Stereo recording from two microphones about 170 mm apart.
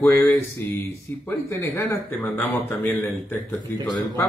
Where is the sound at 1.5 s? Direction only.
15° left (ahead or behind).